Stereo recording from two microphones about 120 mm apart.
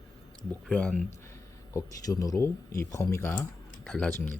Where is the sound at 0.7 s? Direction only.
10° left (ahead or behind).